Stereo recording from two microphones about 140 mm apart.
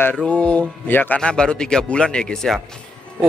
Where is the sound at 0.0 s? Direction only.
10° left (ahead or behind).